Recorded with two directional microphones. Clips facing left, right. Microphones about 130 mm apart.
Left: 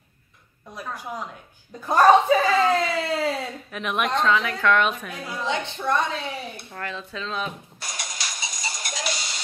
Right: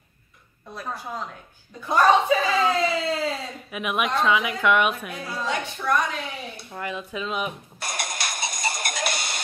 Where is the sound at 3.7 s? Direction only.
10° right (ahead or behind).